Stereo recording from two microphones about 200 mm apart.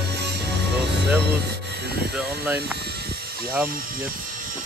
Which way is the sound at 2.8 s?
55° right (ahead or behind).